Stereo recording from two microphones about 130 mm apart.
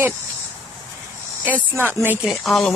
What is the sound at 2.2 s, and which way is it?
Speech, centre (ahead or behind).